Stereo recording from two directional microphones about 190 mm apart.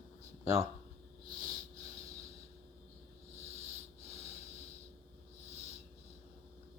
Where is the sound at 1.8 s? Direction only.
15° right (ahead or behind).